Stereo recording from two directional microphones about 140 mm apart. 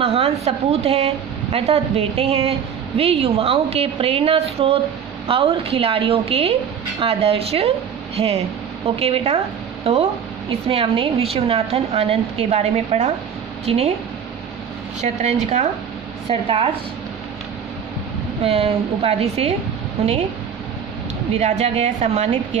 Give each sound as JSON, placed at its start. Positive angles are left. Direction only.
{"t": 0.0, "sound": "speech", "side_deg": -45}
{"t": 16.3, "sound": "a woman's voice", "side_deg": -40}
{"t": 18.4, "sound": "speech", "side_deg": -45}
{"t": 21.4, "sound": "speech", "side_deg": -50}